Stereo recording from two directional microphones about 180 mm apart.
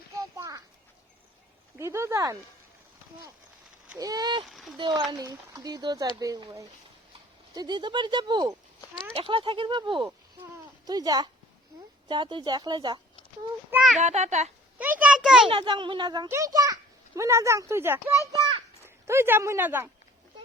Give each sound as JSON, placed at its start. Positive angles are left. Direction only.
{"t": 0.2, "sound": "children playing", "side_deg": -20}
{"t": 1.8, "sound": "speech", "side_deg": -15}
{"t": 3.9, "sound": "speech", "side_deg": -20}
{"t": 4.4, "sound": "speech", "side_deg": 0}
{"t": 4.8, "sound": "speech", "side_deg": -25}
{"t": 14.0, "sound": "a child's voice", "side_deg": -40}
{"t": 14.8, "sound": "a child's voice", "side_deg": -10}
{"t": 15.4, "sound": "speech", "side_deg": -30}